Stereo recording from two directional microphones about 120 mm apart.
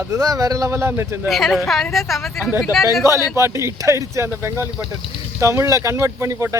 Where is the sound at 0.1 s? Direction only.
30° right (ahead or behind).